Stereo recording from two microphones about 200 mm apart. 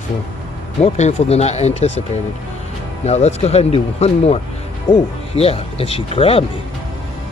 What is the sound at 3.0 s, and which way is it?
Speech, 35° left (ahead or behind).